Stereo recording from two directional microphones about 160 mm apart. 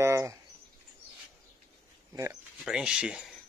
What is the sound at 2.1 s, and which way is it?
Speech, 20° right (ahead or behind).